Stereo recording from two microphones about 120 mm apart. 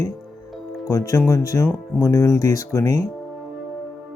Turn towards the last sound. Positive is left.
turn(degrees=30)  # may be behind; listen again after turning